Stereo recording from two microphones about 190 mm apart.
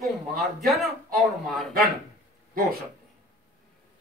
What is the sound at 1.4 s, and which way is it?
Speech, centre (ahead or behind).